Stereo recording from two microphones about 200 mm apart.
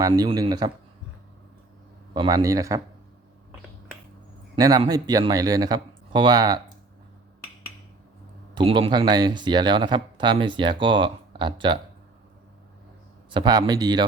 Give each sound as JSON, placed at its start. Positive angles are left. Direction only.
{"t": 0.0, "sound": "speech", "side_deg": -25}
{"t": 2.1, "sound": "a man's voice", "side_deg": -20}
{"t": 4.5, "sound": "speech", "side_deg": -20}
{"t": 8.5, "sound": "speech", "side_deg": -25}
{"t": 13.3, "sound": "speech", "side_deg": -20}